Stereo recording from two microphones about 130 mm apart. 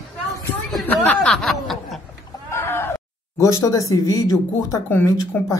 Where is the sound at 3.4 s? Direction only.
25° left (ahead or behind).